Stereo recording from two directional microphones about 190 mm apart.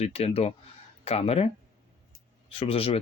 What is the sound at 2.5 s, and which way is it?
Speech, 30° left (ahead or behind).